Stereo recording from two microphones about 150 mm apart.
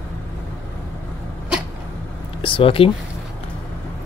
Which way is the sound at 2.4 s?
35° left (ahead or behind).